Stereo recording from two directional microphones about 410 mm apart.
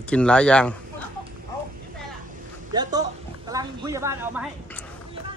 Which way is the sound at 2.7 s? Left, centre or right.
Centre.